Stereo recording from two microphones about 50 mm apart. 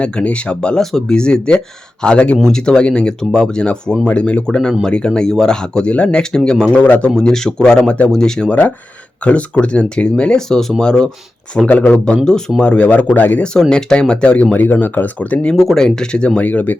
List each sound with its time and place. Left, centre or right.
0.0 s speech: left
0.8 s speech: centre; by 2.4 s left
2.4 s speech: centre
6.8 s speech: left
7.2 s speech: centre
11.7 s speech: left
12.1 s speech: centre; by 13.4 s left
13.4 s speech: centre
14.5 s speech: left
15.7 s speech: centre
16.4 s speech: left